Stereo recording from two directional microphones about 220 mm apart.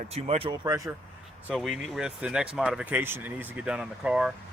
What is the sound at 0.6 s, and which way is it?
Speech, 15° right (ahead or behind).